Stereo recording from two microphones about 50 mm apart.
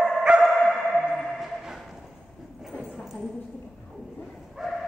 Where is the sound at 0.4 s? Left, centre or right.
Centre.